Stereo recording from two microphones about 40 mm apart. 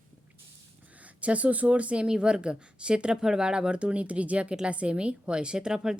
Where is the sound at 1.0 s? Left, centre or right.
Right.